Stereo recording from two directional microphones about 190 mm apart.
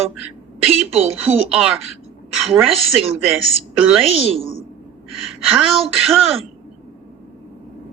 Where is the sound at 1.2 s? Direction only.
5° right (ahead or behind).